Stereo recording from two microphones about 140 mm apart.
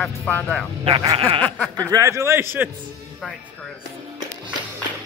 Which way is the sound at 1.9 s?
20° right (ahead or behind).